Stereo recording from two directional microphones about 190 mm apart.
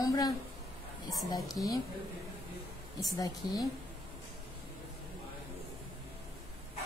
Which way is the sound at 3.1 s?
20° left (ahead or behind).